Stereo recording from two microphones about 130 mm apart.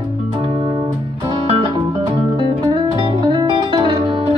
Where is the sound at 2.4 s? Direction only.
40° right (ahead or behind).